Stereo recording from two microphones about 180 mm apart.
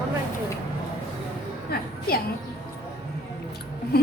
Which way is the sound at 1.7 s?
60° left (ahead or behind).